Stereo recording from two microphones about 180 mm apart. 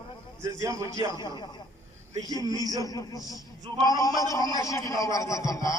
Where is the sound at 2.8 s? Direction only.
20° left (ahead or behind).